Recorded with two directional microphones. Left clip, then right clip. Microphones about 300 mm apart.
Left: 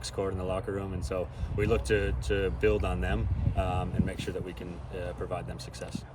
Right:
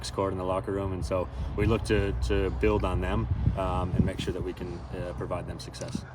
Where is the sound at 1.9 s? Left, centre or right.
Centre.